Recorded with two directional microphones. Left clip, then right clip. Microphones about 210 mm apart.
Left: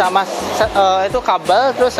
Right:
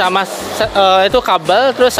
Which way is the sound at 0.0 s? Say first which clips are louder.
Right 1 dB; 40° right (ahead or behind).